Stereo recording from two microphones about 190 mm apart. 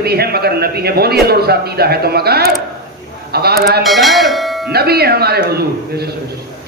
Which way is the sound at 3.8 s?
Centre (ahead or behind).